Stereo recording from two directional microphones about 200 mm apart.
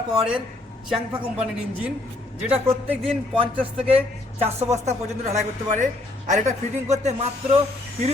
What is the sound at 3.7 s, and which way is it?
Speech, 30° right (ahead or behind).